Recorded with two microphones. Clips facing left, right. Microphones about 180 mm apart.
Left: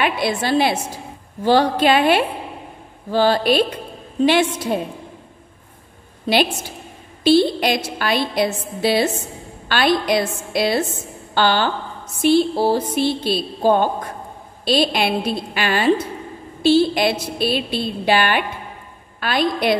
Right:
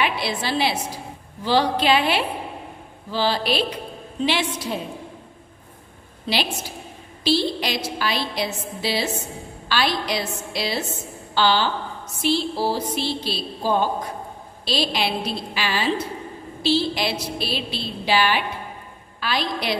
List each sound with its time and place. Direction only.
0.0 s a woman's voice: 50° left (ahead or behind)
6.2 s a woman's voice: 55° left (ahead or behind)